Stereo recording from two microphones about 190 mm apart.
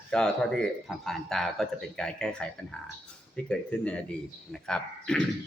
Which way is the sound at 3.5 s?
5° left (ahead or behind).